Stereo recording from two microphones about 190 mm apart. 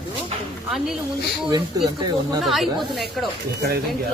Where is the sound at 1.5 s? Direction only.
20° right (ahead or behind).